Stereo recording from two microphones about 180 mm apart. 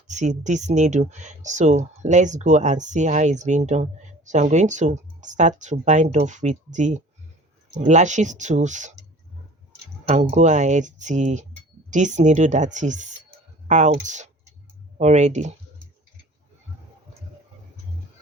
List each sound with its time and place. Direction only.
0.1 s speech: 40° right (ahead or behind)
10.1 s speech: 40° right (ahead or behind)